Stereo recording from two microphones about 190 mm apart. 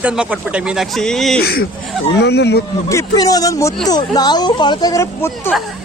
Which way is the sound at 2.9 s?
15° left (ahead or behind).